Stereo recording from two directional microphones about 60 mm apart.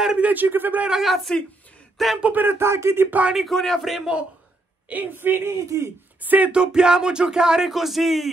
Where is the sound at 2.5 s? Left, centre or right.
Right.